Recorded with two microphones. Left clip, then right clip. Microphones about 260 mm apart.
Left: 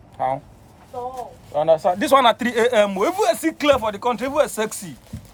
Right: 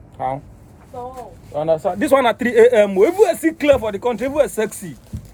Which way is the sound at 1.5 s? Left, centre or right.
Centre.